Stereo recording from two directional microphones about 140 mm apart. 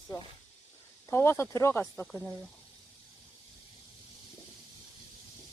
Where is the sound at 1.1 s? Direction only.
15° left (ahead or behind).